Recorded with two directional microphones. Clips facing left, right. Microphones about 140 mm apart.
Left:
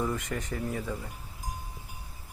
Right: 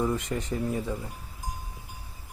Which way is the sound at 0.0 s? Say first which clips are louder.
Right 3 dB; 20° right (ahead or behind).